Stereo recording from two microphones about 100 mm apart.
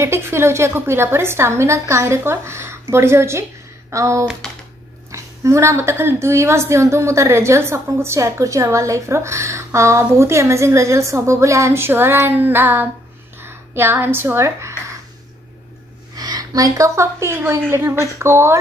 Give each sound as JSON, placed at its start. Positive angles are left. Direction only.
{"t": 0.0, "sound": "a woman's voice", "side_deg": -25}
{"t": 13.4, "sound": "a sound", "side_deg": -25}
{"t": 16.2, "sound": "a woman's voice", "side_deg": -40}